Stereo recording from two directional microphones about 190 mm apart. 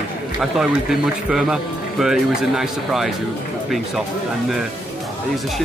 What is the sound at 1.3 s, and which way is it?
Speech, 5° right (ahead or behind).